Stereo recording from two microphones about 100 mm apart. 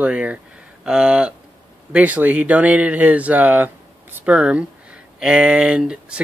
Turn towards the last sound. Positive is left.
turn(degrees=-10)  # may be behind; listen again after turning